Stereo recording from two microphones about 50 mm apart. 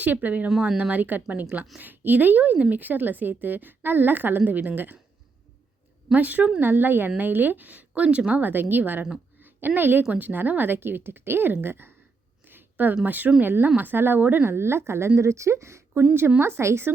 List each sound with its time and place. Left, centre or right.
0.0 s a woman's voice: right
6.1 s a woman's voice: right
8.4 s a woman's voice: right
12.5 s a sound: right
13.1 s a woman's voice: right
14.4 s speech: right
16.4 s speech: right